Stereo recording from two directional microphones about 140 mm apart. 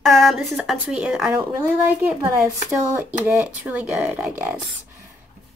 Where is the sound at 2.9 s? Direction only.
15° right (ahead or behind).